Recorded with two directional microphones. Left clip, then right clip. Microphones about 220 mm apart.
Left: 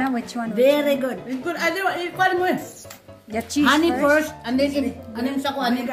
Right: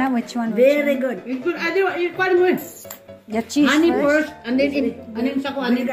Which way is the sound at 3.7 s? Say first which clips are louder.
Even; 55° left (ahead or behind).